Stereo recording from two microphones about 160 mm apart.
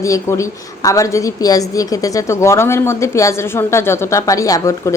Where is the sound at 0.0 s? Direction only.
20° left (ahead or behind).